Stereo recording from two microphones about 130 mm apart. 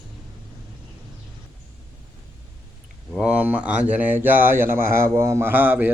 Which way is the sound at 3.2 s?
10° right (ahead or behind).